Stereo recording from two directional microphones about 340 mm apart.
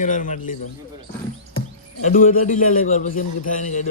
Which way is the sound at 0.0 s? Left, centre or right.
Left.